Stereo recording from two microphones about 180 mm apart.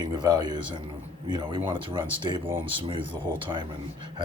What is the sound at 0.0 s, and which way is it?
Speech, 25° right (ahead or behind).